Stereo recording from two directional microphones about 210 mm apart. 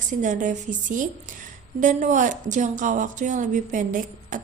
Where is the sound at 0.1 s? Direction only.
35° right (ahead or behind).